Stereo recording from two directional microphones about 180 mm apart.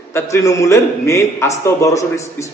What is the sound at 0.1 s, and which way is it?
A man's voice, 15° left (ahead or behind).